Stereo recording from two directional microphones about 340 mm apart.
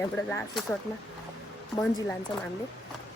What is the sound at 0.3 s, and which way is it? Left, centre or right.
Speech, centre.